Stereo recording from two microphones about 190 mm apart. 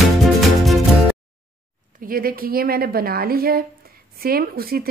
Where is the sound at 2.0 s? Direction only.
50° right (ahead or behind).